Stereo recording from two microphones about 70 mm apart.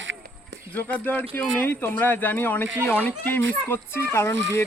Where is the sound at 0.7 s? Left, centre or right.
Left.